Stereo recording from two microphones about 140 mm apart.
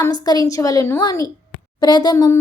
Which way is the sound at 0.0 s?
30° left (ahead or behind).